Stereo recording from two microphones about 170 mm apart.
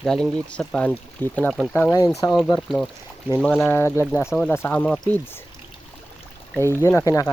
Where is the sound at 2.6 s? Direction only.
5° left (ahead or behind).